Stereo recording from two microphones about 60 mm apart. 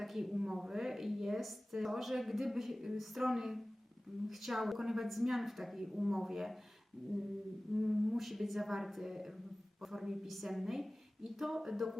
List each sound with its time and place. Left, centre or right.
0.0 s a woman's voice: centre
7.7 s a woman's voice: centre